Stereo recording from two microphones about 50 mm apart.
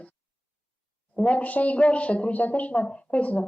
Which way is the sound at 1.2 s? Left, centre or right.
Left.